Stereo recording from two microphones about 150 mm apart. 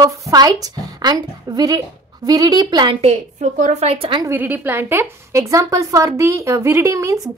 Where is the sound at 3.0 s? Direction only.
50° right (ahead or behind).